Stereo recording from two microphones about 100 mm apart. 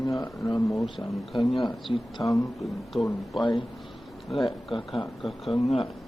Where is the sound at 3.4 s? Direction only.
45° left (ahead or behind).